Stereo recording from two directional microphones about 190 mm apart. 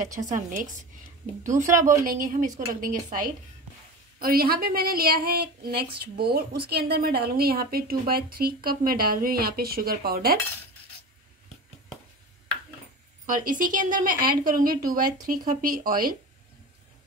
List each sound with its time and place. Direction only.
0.1 s a woman's voice: 40° right (ahead or behind)
13.3 s a woman's voice: 45° right (ahead or behind)